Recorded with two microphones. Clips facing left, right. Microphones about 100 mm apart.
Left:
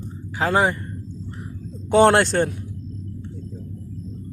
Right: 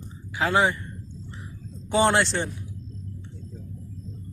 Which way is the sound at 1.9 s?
60° left (ahead or behind).